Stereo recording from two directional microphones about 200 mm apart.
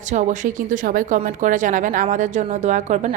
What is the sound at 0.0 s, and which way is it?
A woman's voice, 35° right (ahead or behind).